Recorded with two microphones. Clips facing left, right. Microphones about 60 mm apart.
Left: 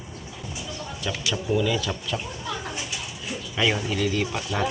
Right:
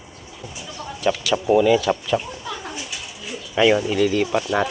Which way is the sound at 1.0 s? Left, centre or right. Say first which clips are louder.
Right 8 dB; right.